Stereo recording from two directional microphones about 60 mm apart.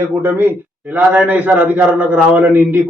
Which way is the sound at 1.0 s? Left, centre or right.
Right.